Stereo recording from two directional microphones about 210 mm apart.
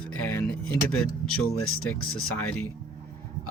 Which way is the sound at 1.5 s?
90° left.